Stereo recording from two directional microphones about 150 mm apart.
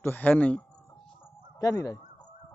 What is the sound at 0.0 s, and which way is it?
Speech, 10° left (ahead or behind).